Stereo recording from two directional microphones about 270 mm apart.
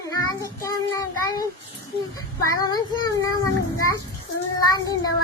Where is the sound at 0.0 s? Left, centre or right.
Centre.